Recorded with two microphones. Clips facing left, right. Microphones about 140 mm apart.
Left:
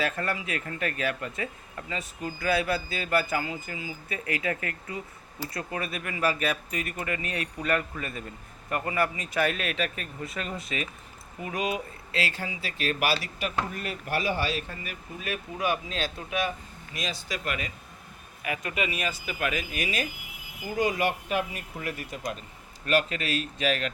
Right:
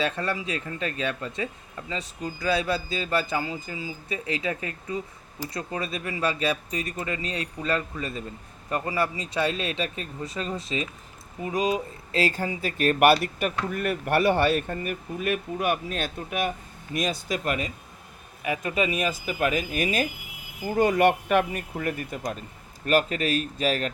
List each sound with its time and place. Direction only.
0.0 s speech: 25° right (ahead or behind); by 17.7 s 40° right (ahead or behind)
18.4 s speech: 30° right (ahead or behind)
20.7 s speech: 60° right (ahead or behind); by 23.9 s 40° right (ahead or behind)